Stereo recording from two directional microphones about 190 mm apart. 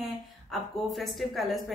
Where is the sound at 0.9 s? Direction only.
Centre (ahead or behind).